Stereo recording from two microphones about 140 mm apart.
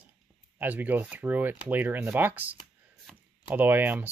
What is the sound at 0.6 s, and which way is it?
Speech, 10° right (ahead or behind).